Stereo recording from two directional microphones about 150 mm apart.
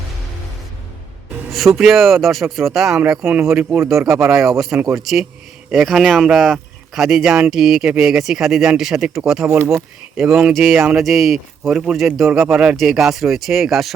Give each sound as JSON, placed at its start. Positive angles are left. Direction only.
{"t": 1.5, "sound": "speech", "side_deg": 0}
{"t": 3.2, "sound": "speech", "side_deg": -15}
{"t": 9.5, "sound": "speech", "side_deg": -20}